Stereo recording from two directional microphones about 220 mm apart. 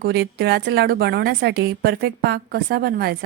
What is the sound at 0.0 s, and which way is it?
Speech, 45° right (ahead or behind).